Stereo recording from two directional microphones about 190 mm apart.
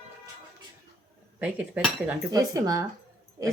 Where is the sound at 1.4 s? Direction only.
10° right (ahead or behind).